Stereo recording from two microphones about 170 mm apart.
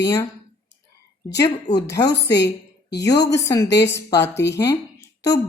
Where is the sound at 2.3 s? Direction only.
85° left.